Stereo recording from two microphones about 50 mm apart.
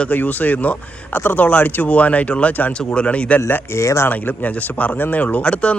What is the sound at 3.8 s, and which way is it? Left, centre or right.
Speech, left.